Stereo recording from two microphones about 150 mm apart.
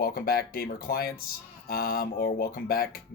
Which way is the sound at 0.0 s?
85° left.